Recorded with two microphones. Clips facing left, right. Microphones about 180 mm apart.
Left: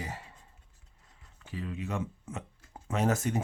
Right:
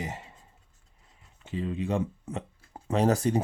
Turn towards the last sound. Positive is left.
turn(degrees=-35)  # may be behind; listen again after turning